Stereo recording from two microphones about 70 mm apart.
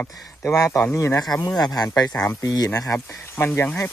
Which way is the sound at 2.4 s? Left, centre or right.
Left.